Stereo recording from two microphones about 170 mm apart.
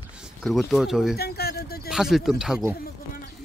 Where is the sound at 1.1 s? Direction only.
70° left (ahead or behind).